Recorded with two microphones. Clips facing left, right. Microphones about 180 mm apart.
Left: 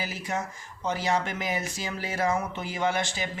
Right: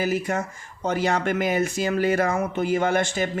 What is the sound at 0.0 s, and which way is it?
Speech, 55° right (ahead or behind).